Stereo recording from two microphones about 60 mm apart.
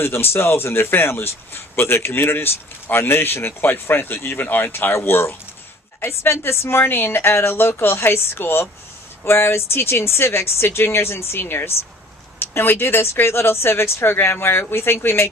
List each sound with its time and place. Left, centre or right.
0.0 s a man's voice: left